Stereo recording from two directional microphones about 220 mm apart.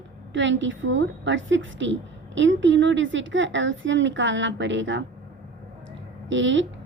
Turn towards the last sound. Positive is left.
turn(degrees=-55)  # may be behind; listen again after turning